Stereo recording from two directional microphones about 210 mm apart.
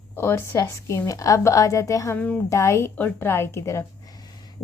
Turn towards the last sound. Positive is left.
turn(degrees=20)  # may be behind; listen again after turning